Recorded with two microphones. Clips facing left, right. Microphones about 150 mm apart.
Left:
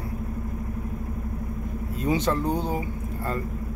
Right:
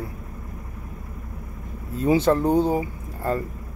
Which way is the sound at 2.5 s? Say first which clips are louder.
Right 7 dB; 10° right (ahead or behind).